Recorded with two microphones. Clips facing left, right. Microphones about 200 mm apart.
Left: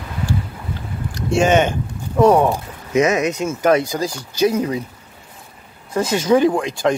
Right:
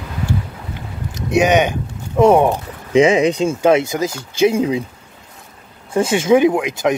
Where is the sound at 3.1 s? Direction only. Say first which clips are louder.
Right 4 dB; 30° right (ahead or behind).